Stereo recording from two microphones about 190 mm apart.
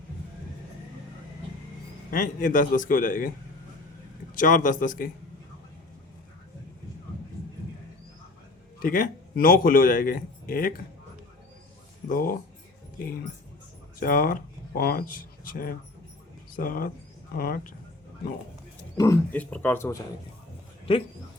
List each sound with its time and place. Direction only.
2.0 s a man's voice: 45° left (ahead or behind)
4.4 s a man's voice: 45° left (ahead or behind)
8.8 s a man's voice: 45° left (ahead or behind)
12.0 s a man's voice: 50° left (ahead or behind)
14.0 s a man's voice: 50° left (ahead or behind)
18.9 s speech: 15° left (ahead or behind)